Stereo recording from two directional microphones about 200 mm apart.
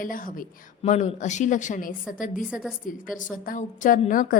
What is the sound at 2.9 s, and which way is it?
A woman's voice, 40° left (ahead or behind).